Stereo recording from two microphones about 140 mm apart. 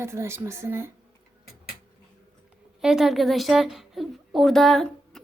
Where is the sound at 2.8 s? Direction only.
5° right (ahead or behind).